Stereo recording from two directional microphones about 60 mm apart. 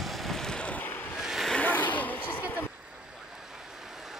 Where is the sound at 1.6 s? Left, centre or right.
Left.